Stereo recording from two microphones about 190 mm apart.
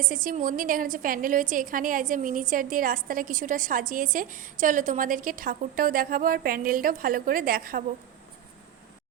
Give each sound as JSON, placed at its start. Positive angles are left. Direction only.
{"t": 0.0, "sound": "a woman's voice", "side_deg": -45}